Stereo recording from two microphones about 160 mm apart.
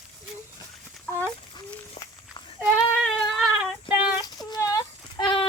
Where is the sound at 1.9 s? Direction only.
30° left (ahead or behind).